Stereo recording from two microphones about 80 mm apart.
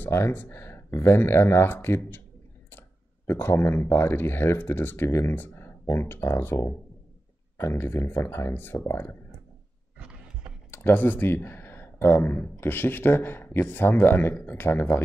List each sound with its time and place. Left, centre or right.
0.1 s speech: left
3.3 s speech: left
10.7 s speech: left